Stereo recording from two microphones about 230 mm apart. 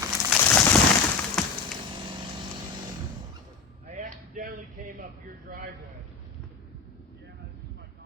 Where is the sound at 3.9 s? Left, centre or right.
Right.